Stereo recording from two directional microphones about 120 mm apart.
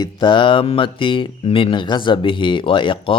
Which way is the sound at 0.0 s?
40° left (ahead or behind).